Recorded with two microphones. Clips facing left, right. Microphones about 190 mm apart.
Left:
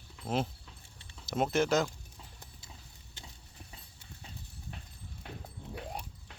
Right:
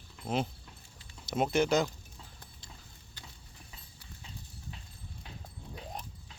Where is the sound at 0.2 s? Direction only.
5° left (ahead or behind).